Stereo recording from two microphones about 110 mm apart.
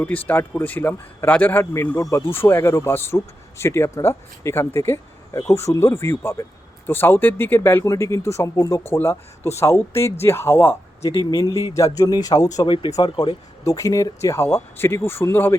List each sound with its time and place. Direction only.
0.0 s a man's voice: 15° left (ahead or behind)
11.2 s speech: 35° left (ahead or behind)
12.6 s speech: 50° left (ahead or behind)
13.0 s speech: 40° left (ahead or behind); by 15.5 s 20° left (ahead or behind)